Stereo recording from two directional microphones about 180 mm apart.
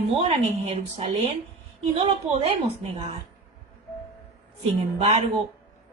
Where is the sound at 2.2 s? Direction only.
5° right (ahead or behind).